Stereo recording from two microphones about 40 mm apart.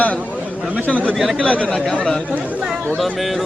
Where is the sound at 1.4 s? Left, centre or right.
Left.